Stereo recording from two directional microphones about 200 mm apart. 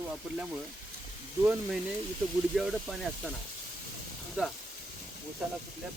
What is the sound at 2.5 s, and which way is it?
Speech, centre (ahead or behind).